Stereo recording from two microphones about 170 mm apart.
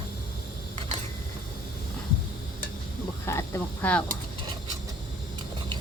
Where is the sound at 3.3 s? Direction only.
15° left (ahead or behind).